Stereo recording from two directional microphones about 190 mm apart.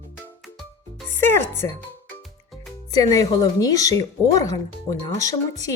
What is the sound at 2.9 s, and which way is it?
Speech, 20° left (ahead or behind).